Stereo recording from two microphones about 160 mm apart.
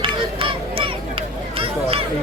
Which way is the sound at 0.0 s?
35° right (ahead or behind).